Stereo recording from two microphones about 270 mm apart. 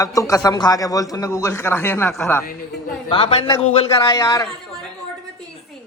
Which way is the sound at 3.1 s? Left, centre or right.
Centre.